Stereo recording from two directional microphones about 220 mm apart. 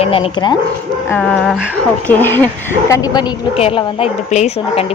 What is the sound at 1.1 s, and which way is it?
A woman's voice, 5° left (ahead or behind).